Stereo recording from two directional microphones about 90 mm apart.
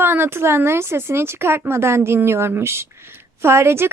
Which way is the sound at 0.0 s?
25° right (ahead or behind).